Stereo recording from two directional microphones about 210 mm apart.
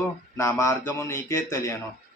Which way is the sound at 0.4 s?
15° left (ahead or behind).